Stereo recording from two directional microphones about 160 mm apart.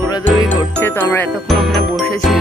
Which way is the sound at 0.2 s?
10° left (ahead or behind).